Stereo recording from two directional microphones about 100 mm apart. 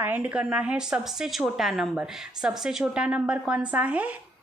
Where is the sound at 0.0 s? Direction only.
15° right (ahead or behind).